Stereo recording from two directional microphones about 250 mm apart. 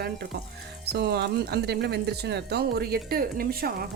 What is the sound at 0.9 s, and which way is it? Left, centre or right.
Speech, right.